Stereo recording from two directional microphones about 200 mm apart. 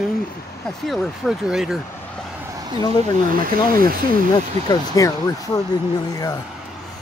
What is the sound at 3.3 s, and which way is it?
Speech, 45° right (ahead or behind).